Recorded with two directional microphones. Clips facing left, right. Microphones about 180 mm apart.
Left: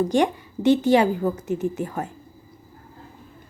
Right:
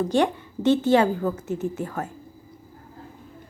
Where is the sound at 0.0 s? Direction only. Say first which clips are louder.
Left 1 dB; 15° left (ahead or behind).